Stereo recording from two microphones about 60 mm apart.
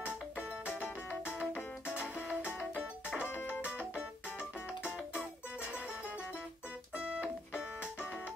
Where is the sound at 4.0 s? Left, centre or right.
Left.